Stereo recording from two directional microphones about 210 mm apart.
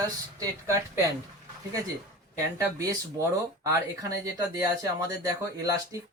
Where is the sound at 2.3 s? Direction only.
15° right (ahead or behind).